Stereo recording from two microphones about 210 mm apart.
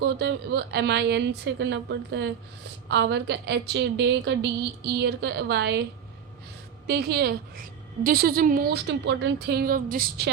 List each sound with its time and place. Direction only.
0.0 s a woman's voice: 55° right (ahead or behind)
6.8 s a woman's voice: 50° right (ahead or behind)